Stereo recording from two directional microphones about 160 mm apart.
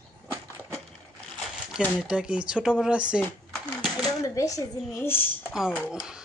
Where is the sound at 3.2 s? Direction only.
10° left (ahead or behind).